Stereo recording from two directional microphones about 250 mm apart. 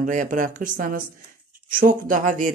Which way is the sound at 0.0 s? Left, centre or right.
Right.